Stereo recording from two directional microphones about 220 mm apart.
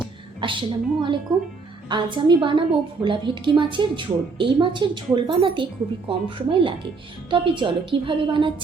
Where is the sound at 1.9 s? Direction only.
20° right (ahead or behind).